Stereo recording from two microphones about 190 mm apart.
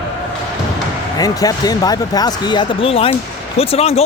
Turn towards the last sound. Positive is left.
turn(degrees=30)  # may be behind; listen again after turning